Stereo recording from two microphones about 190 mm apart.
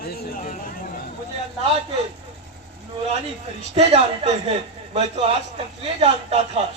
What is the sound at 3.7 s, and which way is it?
A man's voice, 30° right (ahead or behind).